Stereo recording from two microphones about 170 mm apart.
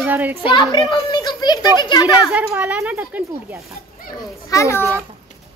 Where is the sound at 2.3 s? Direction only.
10° right (ahead or behind).